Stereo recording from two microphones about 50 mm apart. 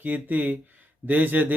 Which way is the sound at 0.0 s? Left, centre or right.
Right.